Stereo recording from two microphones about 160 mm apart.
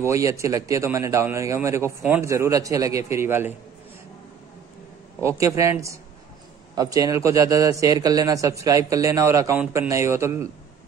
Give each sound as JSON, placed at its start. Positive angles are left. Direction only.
{"t": 0.0, "sound": "a man's voice", "side_deg": -20}
{"t": 5.2, "sound": "a man's voice", "side_deg": -20}